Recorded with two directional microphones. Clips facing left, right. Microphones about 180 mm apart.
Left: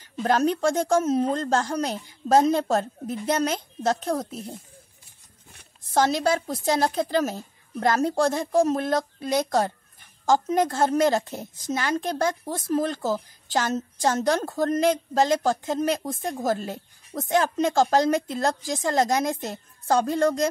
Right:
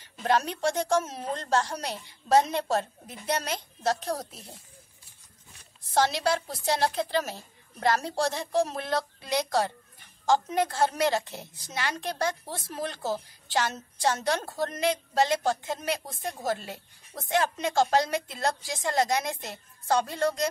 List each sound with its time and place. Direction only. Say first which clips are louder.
0.2 s a woman's voice: left 5 dB; 40° left (ahead or behind)
5.6 s a woman's voice: left 3 dB; 45° left (ahead or behind)